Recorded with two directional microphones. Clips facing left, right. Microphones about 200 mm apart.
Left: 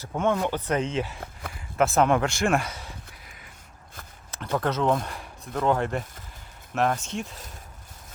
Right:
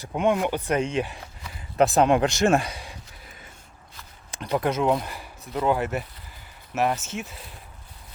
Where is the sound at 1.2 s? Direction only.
55° left (ahead or behind).